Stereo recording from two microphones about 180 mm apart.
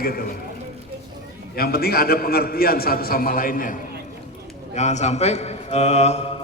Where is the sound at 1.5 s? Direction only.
55° left (ahead or behind).